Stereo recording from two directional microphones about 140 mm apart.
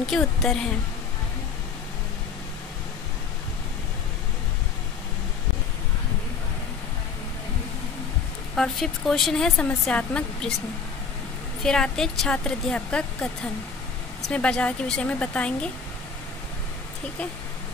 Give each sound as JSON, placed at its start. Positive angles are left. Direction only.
{"t": 0.0, "sound": "speech", "side_deg": 0}
{"t": 8.5, "sound": "speech", "side_deg": 0}
{"t": 11.6, "sound": "speech", "side_deg": 5}